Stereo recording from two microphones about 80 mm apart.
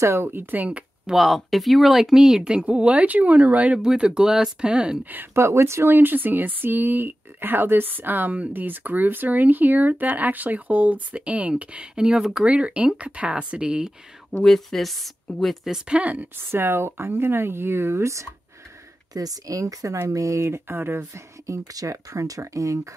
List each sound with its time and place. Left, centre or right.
0.0 s speech: right; by 1.1 s centre
1.1 s speech: centre
5.1 s speech: right; by 13.9 s centre
14.3 s speech: centre
15.6 s speech: centre
16.3 s speech: right
19.1 s speech: right